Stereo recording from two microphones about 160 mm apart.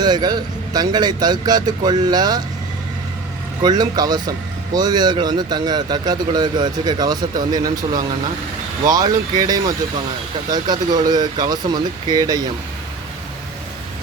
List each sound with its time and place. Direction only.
0.0 s speech: 25° right (ahead or behind)
3.6 s speech: 25° right (ahead or behind)